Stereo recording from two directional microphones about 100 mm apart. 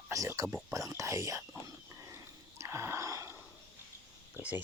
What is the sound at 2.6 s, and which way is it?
Wheeze, 30° right (ahead or behind).